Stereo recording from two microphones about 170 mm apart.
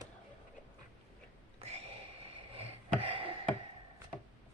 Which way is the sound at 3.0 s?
30° right (ahead or behind).